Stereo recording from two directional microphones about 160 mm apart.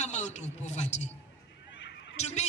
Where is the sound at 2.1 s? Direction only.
45° left (ahead or behind).